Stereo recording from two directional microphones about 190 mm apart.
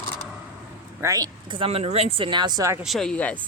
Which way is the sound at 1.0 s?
20° right (ahead or behind).